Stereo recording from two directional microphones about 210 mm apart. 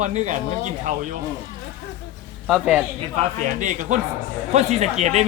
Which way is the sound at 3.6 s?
35° right (ahead or behind).